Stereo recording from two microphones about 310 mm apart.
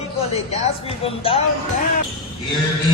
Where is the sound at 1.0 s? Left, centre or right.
Centre.